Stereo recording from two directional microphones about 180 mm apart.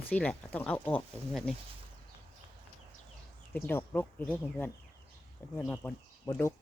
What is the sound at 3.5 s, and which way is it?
Speech, 10° left (ahead or behind).